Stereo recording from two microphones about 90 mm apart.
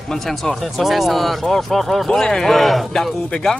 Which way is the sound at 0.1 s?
5° left (ahead or behind).